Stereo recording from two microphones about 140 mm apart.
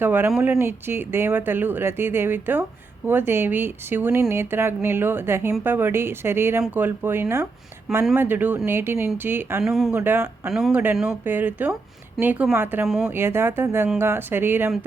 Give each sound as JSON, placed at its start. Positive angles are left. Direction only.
{"t": 0.0, "sound": "speech", "side_deg": -15}
{"t": 9.6, "sound": "speech", "side_deg": -5}
{"t": 10.0, "sound": "speech", "side_deg": -15}